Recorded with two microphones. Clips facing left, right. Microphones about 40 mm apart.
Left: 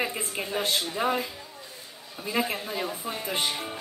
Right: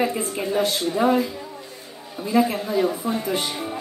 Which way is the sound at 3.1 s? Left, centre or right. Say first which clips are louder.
Right 8 dB; centre.